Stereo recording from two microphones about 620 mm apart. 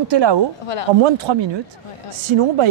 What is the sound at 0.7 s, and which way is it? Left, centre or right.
Speech, left.